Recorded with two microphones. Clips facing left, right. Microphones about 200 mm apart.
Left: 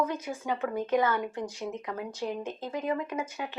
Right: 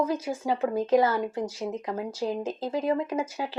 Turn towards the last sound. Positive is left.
turn(degrees=-30)  # may be behind; listen again after turning